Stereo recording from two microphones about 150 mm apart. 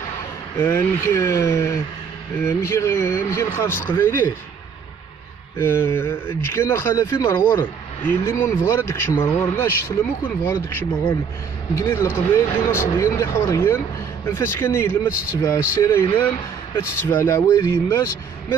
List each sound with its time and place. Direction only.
0.6 s speech: 20° left (ahead or behind)
5.6 s speech: 15° left (ahead or behind)